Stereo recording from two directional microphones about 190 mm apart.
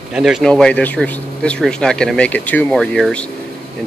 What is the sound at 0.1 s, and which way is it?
Speech, 5° right (ahead or behind).